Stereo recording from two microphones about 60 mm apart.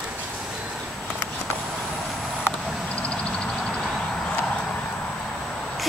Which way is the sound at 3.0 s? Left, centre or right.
Centre.